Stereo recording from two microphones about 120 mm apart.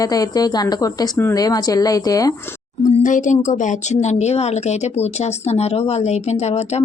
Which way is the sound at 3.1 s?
90° left.